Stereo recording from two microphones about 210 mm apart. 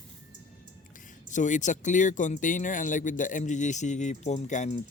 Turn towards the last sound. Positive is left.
turn(degrees=35)  # may be behind; listen again after turning